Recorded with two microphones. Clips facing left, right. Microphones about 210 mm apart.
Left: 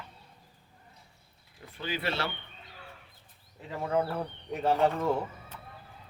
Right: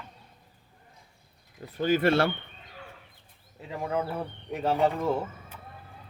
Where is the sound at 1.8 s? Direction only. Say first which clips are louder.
Right 10 dB; 45° right (ahead or behind).